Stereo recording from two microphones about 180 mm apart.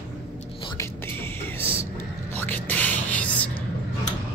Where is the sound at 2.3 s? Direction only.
10° left (ahead or behind).